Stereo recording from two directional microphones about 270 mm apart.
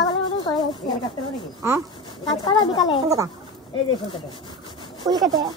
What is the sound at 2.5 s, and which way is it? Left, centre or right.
Speech, centre.